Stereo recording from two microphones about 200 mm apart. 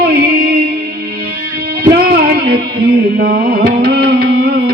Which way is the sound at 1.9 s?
50° right (ahead or behind).